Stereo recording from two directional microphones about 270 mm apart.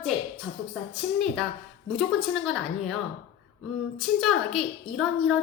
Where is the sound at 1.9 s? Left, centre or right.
Centre.